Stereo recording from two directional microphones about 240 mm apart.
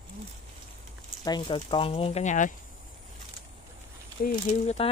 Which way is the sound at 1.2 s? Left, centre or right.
Centre.